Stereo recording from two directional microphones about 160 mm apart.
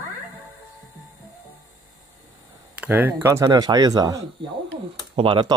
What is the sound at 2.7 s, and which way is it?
Speech, 10° right (ahead or behind).